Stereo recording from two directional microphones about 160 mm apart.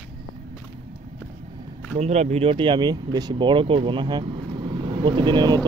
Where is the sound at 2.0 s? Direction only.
45° right (ahead or behind).